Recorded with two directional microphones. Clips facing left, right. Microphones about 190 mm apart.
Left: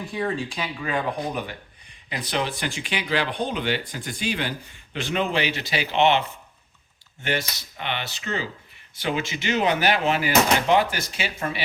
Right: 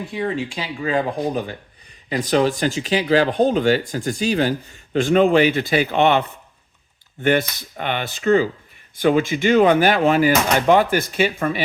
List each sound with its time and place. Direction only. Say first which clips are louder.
0.1 s speech: right 2 dB; 25° right (ahead or behind); by 11.6 s 50° right (ahead or behind)